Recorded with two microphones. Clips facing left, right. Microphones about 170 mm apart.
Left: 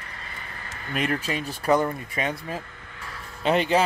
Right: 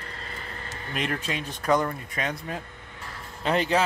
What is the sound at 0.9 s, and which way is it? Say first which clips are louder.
Speech: left 3 dB; 5° left (ahead or behind).